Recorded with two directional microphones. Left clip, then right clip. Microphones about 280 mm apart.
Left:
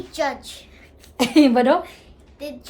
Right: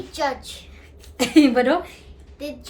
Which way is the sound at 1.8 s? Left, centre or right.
Centre.